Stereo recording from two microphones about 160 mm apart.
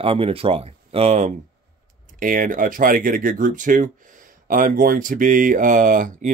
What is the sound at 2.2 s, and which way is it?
Speech, 55° right (ahead or behind).